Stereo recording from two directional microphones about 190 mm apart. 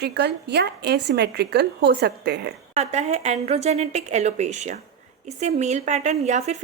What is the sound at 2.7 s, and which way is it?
A woman's voice, 35° right (ahead or behind).